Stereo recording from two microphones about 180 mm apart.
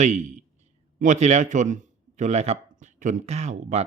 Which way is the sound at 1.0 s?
40° right (ahead or behind).